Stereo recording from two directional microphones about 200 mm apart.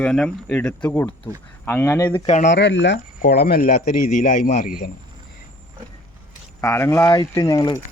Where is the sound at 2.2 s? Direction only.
35° left (ahead or behind).